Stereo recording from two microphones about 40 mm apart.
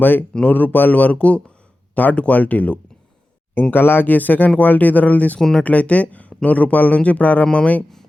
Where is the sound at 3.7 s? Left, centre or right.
Left.